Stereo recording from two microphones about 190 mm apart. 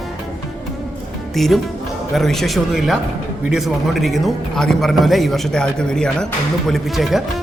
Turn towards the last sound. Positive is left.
turn(degrees=0)  # may be behind; listen again after turning